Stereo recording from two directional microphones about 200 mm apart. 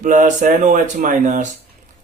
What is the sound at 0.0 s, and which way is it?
Speech, 40° right (ahead or behind).